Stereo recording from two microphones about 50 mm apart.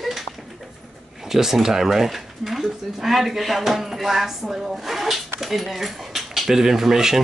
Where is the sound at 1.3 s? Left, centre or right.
Centre.